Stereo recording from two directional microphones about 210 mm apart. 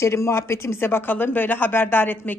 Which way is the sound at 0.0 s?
15° left (ahead or behind).